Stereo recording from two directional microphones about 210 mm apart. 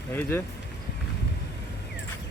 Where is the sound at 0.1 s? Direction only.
10° left (ahead or behind).